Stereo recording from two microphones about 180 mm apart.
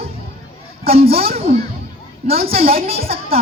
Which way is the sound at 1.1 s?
55° right (ahead or behind).